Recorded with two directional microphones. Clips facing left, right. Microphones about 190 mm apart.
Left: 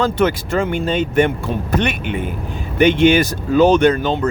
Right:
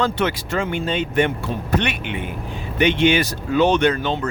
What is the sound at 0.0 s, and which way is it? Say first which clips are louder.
Speech: left 4 dB; 45° left (ahead or behind).